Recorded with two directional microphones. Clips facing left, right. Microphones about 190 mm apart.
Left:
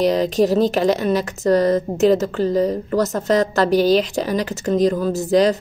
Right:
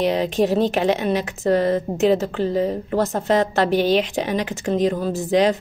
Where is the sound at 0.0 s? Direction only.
40° left (ahead or behind).